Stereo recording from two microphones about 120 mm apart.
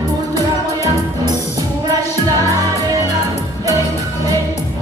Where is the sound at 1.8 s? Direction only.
30° right (ahead or behind).